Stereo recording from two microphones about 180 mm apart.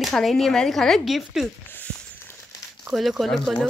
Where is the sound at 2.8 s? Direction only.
Centre (ahead or behind).